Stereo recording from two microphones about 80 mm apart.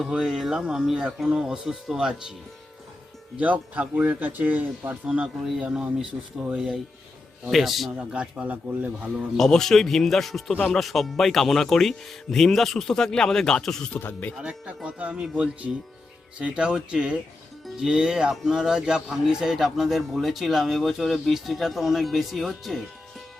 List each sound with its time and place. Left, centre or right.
0.1 s speech: centre
3.3 s speech: centre
7.9 s speech: centre
9.1 s speech: centre
14.0 s speech: left
14.3 s speech: centre